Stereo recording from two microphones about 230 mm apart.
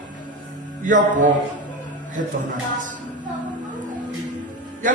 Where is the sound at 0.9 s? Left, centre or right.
Right.